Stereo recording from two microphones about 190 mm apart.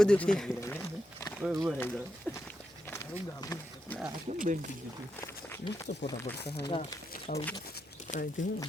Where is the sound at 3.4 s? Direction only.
15° left (ahead or behind).